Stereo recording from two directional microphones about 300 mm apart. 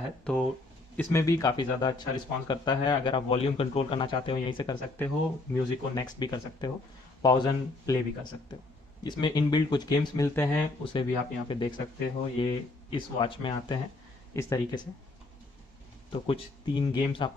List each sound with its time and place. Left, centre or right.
0.2 s speech: centre
16.1 s speech: centre